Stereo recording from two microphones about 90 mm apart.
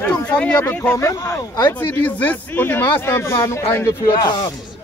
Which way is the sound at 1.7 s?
20° left (ahead or behind).